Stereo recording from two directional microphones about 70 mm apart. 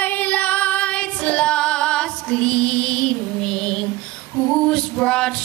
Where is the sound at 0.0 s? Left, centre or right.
Left.